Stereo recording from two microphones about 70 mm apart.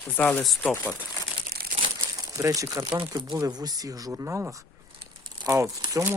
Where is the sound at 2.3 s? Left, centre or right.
Right.